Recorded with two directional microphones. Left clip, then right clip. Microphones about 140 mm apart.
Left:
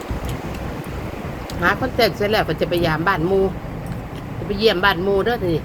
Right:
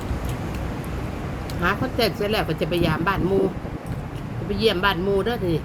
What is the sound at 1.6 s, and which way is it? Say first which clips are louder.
Speech: left 5 dB; 25° right (ahead or behind).